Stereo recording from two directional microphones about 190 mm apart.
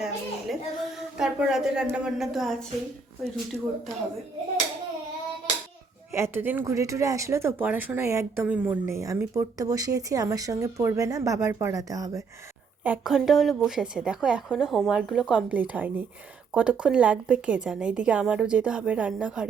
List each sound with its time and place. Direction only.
0.0 s a woman's voice: centre (ahead or behind)
6.1 s speech: 10° right (ahead or behind)
12.8 s speech: 5° right (ahead or behind)